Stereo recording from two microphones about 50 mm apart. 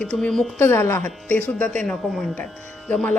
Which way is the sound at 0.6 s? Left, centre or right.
Left.